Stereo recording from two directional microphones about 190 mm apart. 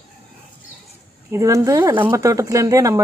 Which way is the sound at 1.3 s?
15° right (ahead or behind).